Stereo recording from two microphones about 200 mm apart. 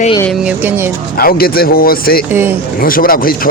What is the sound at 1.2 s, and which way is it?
A man's voice, 50° left (ahead or behind).